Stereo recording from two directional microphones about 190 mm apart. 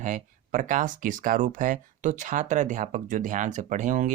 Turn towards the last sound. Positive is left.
turn(degrees=-40)  # may be behind; listen again after turning